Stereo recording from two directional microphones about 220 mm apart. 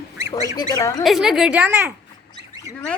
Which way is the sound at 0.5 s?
15° left (ahead or behind).